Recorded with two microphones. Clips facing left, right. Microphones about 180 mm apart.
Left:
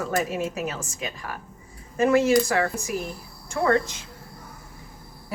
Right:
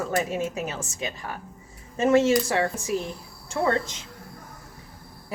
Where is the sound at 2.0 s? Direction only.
25° right (ahead or behind).